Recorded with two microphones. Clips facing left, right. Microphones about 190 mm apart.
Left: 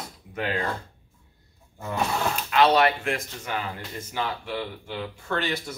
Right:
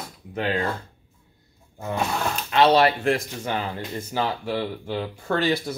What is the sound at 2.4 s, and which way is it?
Speech, 30° right (ahead or behind).